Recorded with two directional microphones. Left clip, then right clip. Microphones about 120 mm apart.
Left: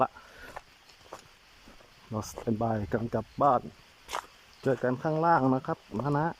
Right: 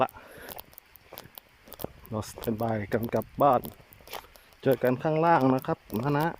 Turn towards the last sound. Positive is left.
turn(degrees=0)  # may be behind; listen again after turning